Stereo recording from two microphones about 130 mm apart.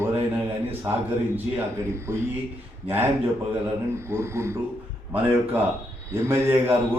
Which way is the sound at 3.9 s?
20° right (ahead or behind).